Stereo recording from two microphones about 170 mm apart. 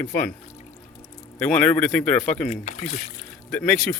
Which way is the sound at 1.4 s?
10° left (ahead or behind).